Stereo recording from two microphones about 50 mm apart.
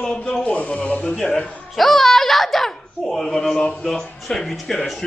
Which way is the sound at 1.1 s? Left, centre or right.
Centre.